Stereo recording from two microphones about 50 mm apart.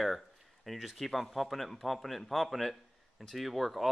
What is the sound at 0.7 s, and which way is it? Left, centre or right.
Speech, centre.